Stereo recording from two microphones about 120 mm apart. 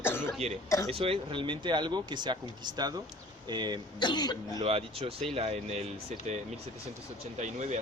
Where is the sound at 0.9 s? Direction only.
50° right (ahead or behind); by 3.8 s 35° right (ahead or behind).